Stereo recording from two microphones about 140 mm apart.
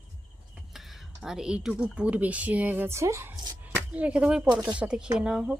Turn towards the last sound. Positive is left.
turn(degrees=-5)  # may be behind; listen again after turning